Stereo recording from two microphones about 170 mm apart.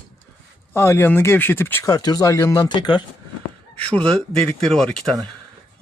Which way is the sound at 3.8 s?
5° left (ahead or behind).